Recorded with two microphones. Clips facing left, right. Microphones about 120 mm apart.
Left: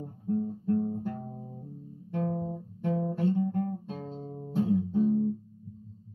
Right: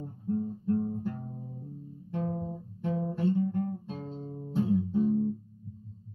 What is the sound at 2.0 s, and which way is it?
Guitar, 60° left (ahead or behind).